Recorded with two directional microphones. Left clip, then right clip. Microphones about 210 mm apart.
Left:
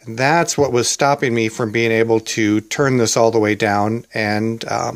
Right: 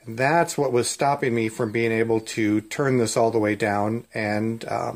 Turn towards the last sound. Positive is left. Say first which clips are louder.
# left 6 dB
turn(degrees=35)  # may be behind; listen again after turning